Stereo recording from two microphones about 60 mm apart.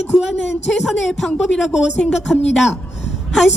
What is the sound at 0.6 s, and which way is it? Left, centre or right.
A woman's voice, centre.